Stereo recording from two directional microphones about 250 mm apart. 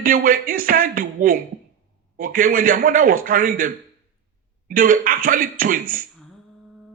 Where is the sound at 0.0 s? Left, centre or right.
Right.